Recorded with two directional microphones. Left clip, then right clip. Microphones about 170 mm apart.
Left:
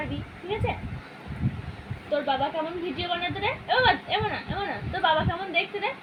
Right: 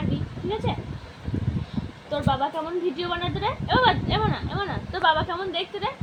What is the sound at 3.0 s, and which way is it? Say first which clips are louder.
Speech: right 1 dB; 20° right (ahead or behind).